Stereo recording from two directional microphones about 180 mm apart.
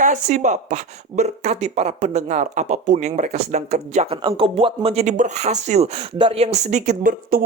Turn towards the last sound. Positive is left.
turn(degrees=-50)  # may be behind; listen again after turning